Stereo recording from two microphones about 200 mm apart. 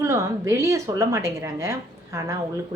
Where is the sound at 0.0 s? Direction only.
15° right (ahead or behind).